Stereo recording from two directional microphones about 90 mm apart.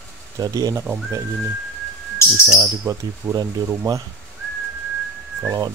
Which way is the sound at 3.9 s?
45° right (ahead or behind).